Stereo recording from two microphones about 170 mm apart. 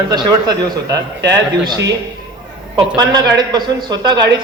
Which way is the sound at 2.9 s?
25° right (ahead or behind).